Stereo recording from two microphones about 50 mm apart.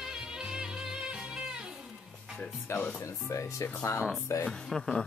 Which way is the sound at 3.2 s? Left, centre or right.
Left.